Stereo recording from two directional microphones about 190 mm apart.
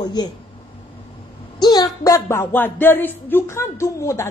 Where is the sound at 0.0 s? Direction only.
20° left (ahead or behind).